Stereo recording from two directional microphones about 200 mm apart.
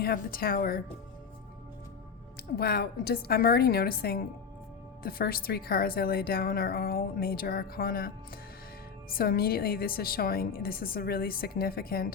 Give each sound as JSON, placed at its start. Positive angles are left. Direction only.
{"t": 0.0, "sound": "a woman's voice", "side_deg": 50}
{"t": 2.6, "sound": "a woman's voice", "side_deg": 50}